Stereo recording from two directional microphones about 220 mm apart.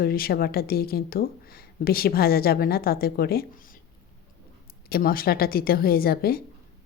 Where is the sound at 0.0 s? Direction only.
45° left (ahead or behind).